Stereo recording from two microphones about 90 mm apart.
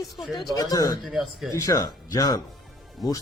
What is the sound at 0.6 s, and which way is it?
Speech, 40° left (ahead or behind).